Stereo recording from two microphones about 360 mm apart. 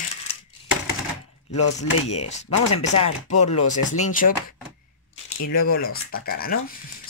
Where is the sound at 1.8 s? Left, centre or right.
Centre.